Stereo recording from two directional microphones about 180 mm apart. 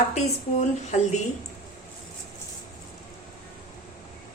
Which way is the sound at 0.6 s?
40° left (ahead or behind).